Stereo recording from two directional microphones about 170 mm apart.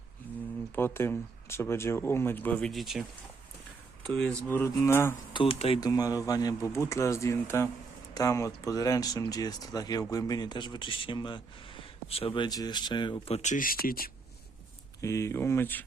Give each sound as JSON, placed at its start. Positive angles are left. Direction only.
{"t": 0.2, "sound": "a sound", "side_deg": 10}
{"t": 0.8, "sound": "speech", "side_deg": 15}
{"t": 4.0, "sound": "speech", "side_deg": 0}
{"t": 4.4, "sound": "speech", "side_deg": 15}
{"t": 5.3, "sound": "speech", "side_deg": 30}
{"t": 5.8, "sound": "speech", "side_deg": 20}
{"t": 15.0, "sound": "speech", "side_deg": 15}